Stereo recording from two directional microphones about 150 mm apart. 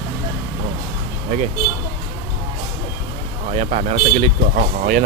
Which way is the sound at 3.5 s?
45° right (ahead or behind).